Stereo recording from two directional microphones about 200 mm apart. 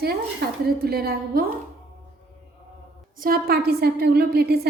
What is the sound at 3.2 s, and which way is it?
A woman's voice, 45° right (ahead or behind).